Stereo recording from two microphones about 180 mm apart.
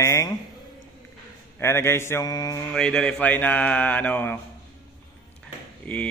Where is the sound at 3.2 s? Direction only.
10° left (ahead or behind).